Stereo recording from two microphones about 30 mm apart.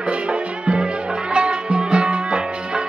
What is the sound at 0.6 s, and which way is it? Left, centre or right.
Music, right.